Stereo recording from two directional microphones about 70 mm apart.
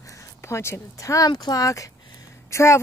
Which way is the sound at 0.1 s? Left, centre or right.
Left.